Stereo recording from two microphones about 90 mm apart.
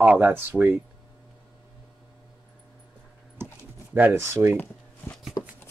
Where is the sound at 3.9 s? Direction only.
25° right (ahead or behind).